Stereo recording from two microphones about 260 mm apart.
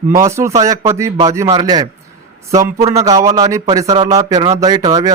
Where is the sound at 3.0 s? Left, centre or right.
Centre.